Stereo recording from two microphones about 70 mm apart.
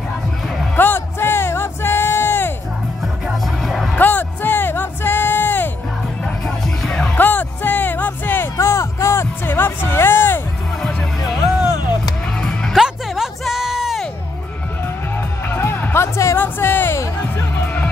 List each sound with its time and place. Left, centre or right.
0.7 s music: left
3.6 s music: centre
3.9 s music: left
6.2 s music: centre
7.2 s music: left
8.5 s music: left
10.8 s music: centre
12.7 s music: centre
15.5 s music: left